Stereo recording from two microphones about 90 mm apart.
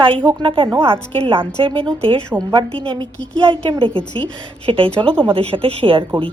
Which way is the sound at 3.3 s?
65° right (ahead or behind).